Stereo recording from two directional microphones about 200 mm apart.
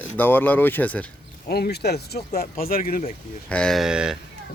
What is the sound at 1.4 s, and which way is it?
Speech, 55° left (ahead or behind).